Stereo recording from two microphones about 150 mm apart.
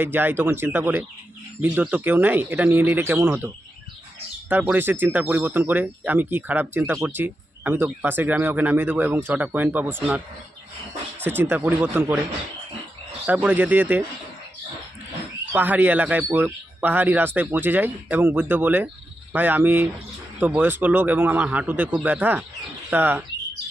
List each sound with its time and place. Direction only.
0.0 s speech: 15° right (ahead or behind)
11.2 s speech: 15° right (ahead or behind)
13.2 s speech: 10° right (ahead or behind)
15.5 s speech: 10° right (ahead or behind)